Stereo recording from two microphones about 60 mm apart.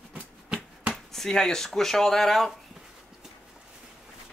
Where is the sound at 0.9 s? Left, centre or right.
Centre.